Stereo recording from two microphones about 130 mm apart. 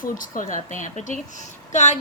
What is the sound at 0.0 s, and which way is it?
A woman's voice, 90° left.